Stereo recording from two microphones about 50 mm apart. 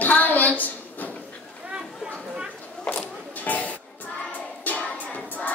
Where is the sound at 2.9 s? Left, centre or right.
Centre.